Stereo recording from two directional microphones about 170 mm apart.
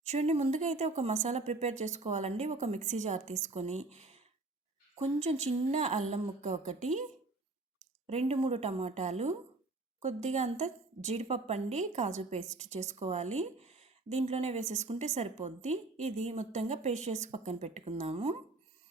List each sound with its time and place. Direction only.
0.0 s a woman's voice: 40° right (ahead or behind)
8.0 s a woman's voice: 40° right (ahead or behind)